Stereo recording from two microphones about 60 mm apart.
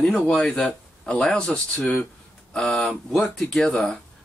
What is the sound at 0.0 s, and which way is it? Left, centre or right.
Speech, centre.